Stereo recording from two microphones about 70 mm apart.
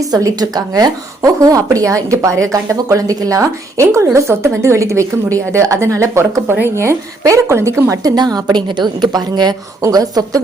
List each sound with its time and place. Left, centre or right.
0.0 s a woman's voice: right
8.1 s a woman's voice: right
9.8 s a woman's voice: right